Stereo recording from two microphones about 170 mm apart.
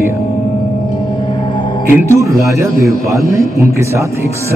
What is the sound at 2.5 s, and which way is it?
A man's voice, 15° right (ahead or behind).